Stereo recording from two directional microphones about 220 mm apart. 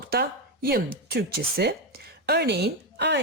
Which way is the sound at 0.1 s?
45° right (ahead or behind).